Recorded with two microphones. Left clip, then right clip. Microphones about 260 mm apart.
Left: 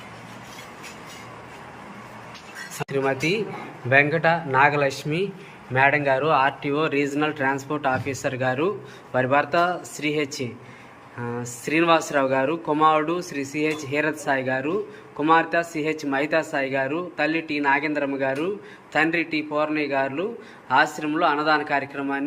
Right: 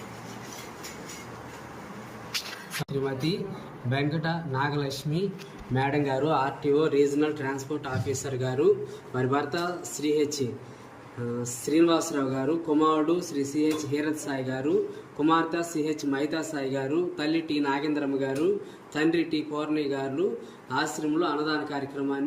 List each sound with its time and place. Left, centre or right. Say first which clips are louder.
2.9 s speech: left 8 dB; left
4.9 s speech: left 5 dB; centre
11.6 s a man's voice: left 4 dB; centre